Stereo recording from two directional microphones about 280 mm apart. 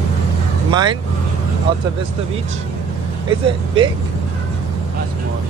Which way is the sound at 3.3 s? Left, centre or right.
Centre.